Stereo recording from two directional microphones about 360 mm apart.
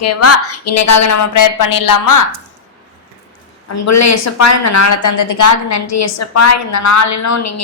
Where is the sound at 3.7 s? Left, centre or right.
Left.